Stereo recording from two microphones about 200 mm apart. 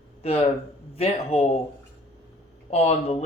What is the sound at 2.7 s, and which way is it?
Speech, 30° left (ahead or behind).